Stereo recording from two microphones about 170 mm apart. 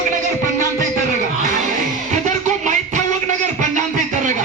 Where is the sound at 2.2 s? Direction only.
45° right (ahead or behind).